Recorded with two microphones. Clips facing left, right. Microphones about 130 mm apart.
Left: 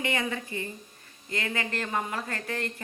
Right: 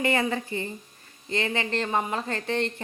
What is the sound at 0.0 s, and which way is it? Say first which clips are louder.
A woman's voice: right 5 dB; 35° right (ahead or behind).